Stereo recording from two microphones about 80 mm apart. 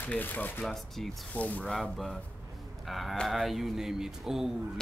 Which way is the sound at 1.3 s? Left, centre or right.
Centre.